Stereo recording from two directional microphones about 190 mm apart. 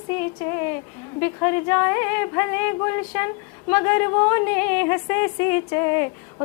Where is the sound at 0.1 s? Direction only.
10° left (ahead or behind).